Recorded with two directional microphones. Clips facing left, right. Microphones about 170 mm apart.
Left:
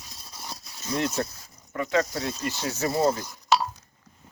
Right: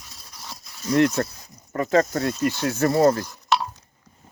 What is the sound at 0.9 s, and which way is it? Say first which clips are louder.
Speech: right 8 dB; 60° right (ahead or behind).